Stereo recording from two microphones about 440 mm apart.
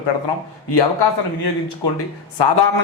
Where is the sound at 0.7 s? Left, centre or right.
Left.